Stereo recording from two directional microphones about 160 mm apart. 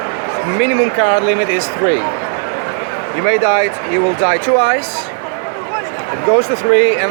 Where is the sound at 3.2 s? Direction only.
50° left (ahead or behind).